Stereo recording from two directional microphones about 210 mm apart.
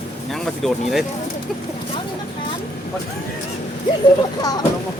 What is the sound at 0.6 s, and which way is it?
Speech, centre (ahead or behind).